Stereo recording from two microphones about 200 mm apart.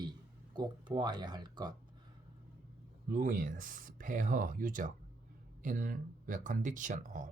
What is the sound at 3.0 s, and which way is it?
Speech, 40° right (ahead or behind).